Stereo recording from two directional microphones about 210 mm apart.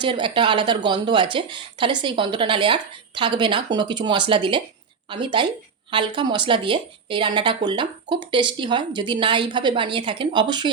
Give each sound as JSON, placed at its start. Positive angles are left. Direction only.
{"t": 0.0, "sound": "a woman's voice", "side_deg": -25}